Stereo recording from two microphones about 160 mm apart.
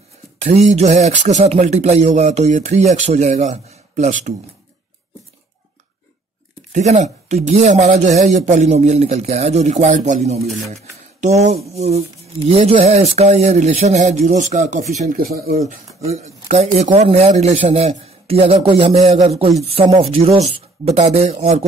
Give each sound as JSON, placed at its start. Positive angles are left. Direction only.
{"t": 0.4, "sound": "speech", "side_deg": -45}
{"t": 6.7, "sound": "speech", "side_deg": -45}
{"t": 10.4, "sound": "speech", "side_deg": 0}
{"t": 10.7, "sound": "speech", "side_deg": -45}
{"t": 15.1, "sound": "speech", "side_deg": -65}
{"t": 15.5, "sound": "speech", "side_deg": -45}